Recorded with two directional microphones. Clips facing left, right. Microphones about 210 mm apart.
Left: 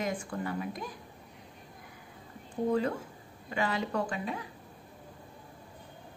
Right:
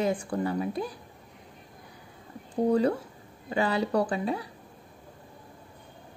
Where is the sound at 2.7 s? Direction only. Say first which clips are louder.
Right 5 dB; 35° right (ahead or behind).